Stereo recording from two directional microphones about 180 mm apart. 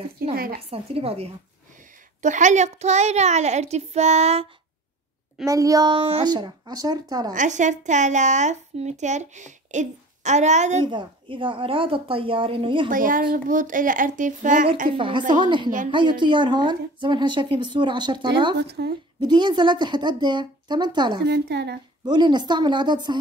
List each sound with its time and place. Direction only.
0.2 s speech: 55° right (ahead or behind)
0.6 s a woman's voice: 35° right (ahead or behind)
5.4 s a woman's voice: 20° right (ahead or behind)
7.3 s a woman's voice: 45° right (ahead or behind)
10.9 s a woman's voice: 25° right (ahead or behind)
12.9 s speech: 50° right (ahead or behind)
14.9 s a woman's voice: 30° right (ahead or behind)
18.6 s a woman's voice: 65° right (ahead or behind)
19.1 s a woman's voice: 25° right (ahead or behind)
21.3 s a woman's voice: 70° right (ahead or behind)
22.0 s a woman's voice: 25° right (ahead or behind)